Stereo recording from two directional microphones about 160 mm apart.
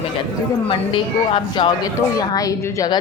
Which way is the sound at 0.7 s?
35° left (ahead or behind).